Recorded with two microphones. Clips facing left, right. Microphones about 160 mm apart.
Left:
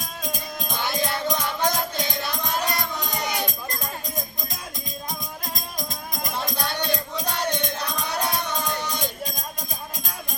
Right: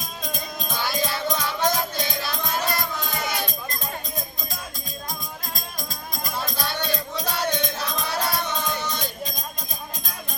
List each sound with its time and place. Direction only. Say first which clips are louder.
0.3 s music: even; 15° left (ahead or behind)
5.5 s music: left 2 dB; 20° left (ahead or behind)